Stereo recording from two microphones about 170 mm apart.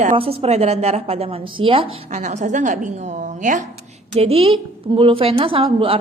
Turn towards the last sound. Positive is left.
turn(degrees=-35)  # may be behind; listen again after turning